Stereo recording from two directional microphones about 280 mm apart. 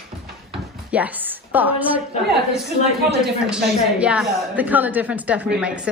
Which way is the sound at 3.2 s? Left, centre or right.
Centre.